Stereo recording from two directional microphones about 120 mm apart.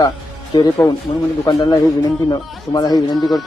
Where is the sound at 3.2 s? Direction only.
Centre (ahead or behind).